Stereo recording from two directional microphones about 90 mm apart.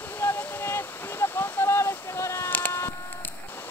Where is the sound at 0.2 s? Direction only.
25° left (ahead or behind).